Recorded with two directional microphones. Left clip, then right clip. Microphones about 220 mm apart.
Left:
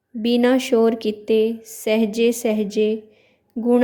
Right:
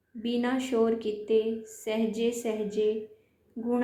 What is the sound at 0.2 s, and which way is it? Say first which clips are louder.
A woman's voice: left 12 dB; 50° left (ahead or behind).